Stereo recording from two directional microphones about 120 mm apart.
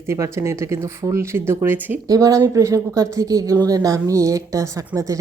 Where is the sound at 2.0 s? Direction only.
30° right (ahead or behind).